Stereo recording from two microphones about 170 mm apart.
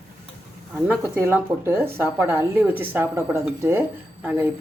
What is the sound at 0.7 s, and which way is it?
Speech, 10° right (ahead or behind).